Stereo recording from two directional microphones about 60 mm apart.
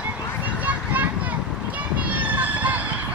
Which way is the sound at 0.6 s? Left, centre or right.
Right.